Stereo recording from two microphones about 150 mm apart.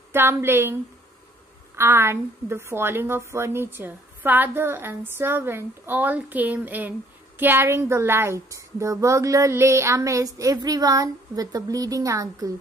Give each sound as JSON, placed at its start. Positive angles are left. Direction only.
{"t": 0.1, "sound": "a woman's voice", "side_deg": -15}
{"t": 1.8, "sound": "a woman's voice", "side_deg": -15}